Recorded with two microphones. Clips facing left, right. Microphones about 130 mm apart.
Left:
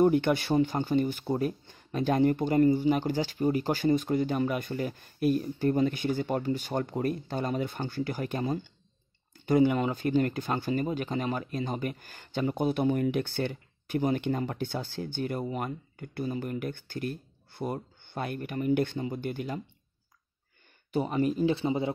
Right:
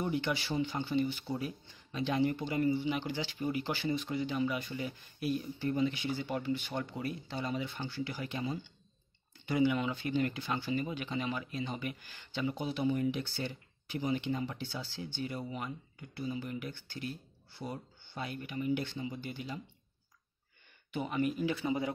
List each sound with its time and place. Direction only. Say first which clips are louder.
0.0 s speech: left 10 dB; 55° left (ahead or behind)
20.9 s speech: left 6 dB; 35° left (ahead or behind)